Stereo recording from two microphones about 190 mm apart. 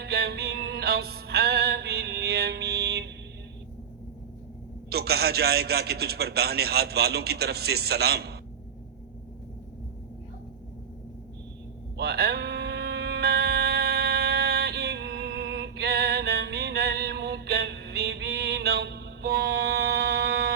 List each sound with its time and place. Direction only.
0.0 s music: 60° right (ahead or behind)
4.9 s a man's voice: 55° right (ahead or behind)
11.9 s a sound: 60° right (ahead or behind)